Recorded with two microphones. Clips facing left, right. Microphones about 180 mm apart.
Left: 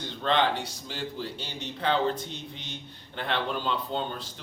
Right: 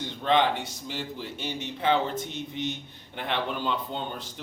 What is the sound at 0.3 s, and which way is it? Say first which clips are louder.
A man's voice: right 2 dB; 15° right (ahead or behind).